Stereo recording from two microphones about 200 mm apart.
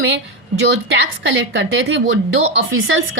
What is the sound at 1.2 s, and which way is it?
A woman's voice, 65° right (ahead or behind).